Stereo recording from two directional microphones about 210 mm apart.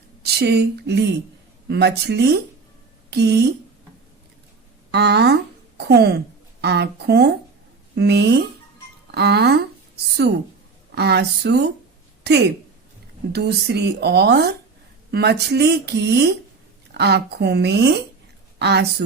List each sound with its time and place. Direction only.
0.3 s speech: 50° right (ahead or behind)
4.9 s a woman's voice: 50° right (ahead or behind)
13.3 s speech: 50° right (ahead or behind)